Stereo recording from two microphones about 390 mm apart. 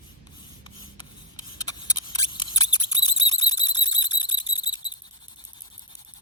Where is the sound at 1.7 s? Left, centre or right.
Centre.